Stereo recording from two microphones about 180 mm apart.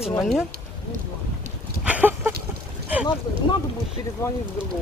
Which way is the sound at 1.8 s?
10° right (ahead or behind).